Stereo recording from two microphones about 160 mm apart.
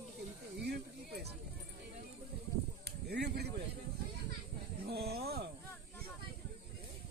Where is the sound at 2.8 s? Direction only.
90° right.